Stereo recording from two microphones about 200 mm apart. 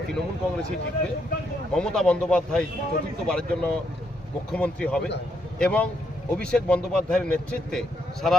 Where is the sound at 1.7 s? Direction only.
5° left (ahead or behind).